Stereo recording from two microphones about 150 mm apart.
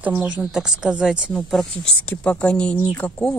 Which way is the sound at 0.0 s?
10° right (ahead or behind).